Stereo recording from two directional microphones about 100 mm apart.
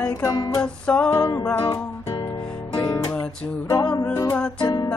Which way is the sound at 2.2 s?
55° left (ahead or behind).